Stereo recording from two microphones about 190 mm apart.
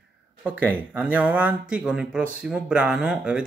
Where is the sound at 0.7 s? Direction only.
5° right (ahead or behind).